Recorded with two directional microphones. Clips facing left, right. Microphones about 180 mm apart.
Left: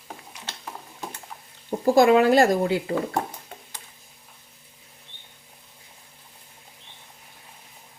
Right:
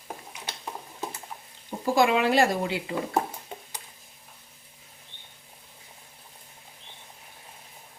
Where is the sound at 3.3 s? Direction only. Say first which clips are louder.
Right 2 dB; 15° right (ahead or behind).